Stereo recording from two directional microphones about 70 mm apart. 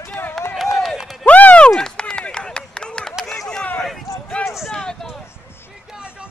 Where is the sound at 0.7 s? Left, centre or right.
Centre.